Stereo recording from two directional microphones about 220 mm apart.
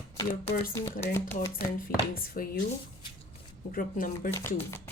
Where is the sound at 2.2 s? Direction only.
40° left (ahead or behind).